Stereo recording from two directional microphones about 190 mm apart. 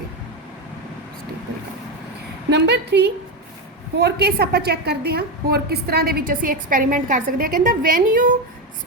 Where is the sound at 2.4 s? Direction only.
65° right (ahead or behind); by 8.3 s 45° right (ahead or behind).